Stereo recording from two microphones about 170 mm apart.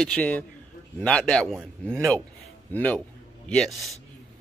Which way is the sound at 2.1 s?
10° left (ahead or behind).